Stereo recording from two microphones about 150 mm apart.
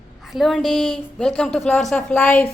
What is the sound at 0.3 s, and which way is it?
A woman's voice, centre (ahead or behind).